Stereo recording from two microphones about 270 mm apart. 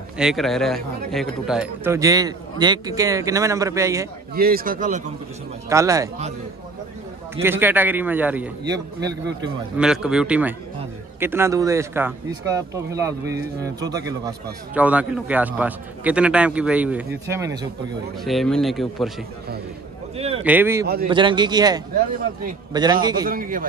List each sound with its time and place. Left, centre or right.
0.2 s speech: centre
4.4 s a man's voice: right
5.7 s speech: centre
7.4 s speech: centre
9.8 s a man's voice: centre
18.2 s a man's voice: centre
20.4 s speech: centre
20.8 s a man's voice: right
21.1 s speech: centre
22.1 s a man's voice: right
22.7 s speech: centre
23.2 s a man's voice: right